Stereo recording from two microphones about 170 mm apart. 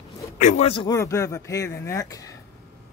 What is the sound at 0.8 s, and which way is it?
Speech, 15° left (ahead or behind).